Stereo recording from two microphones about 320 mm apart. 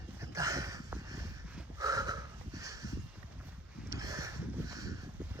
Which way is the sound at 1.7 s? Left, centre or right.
Centre.